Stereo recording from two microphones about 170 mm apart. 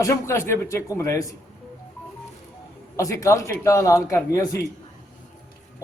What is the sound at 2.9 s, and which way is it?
A man's voice, 20° left (ahead or behind).